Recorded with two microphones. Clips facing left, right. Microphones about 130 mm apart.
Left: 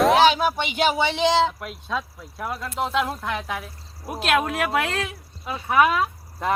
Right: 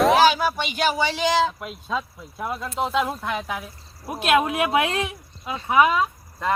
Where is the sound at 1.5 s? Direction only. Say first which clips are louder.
Right 1 dB; centre (ahead or behind).